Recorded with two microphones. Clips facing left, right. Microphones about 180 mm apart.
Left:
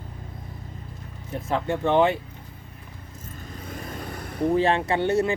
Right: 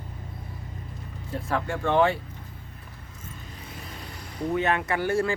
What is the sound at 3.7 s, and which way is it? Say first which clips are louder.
Vehicle: left 8 dB; 50° left (ahead or behind).